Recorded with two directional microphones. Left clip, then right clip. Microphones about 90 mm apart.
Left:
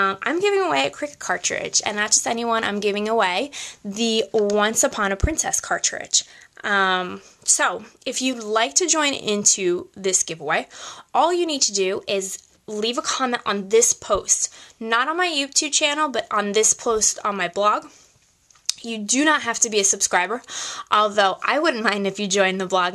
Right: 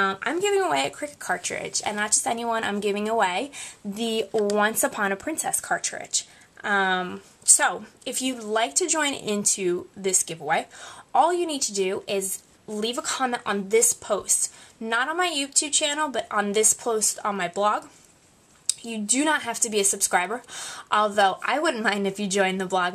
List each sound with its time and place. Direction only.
0.0 s speech: 30° left (ahead or behind)